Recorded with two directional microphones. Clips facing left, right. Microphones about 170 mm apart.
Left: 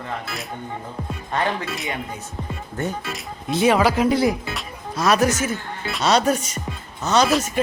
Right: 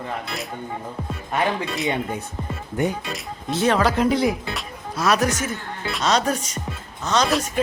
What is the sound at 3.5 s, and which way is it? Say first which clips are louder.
Speech: left 2 dB; 10° left (ahead or behind).